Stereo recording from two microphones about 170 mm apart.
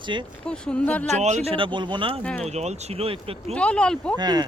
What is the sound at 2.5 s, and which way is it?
Speech, 40° right (ahead or behind).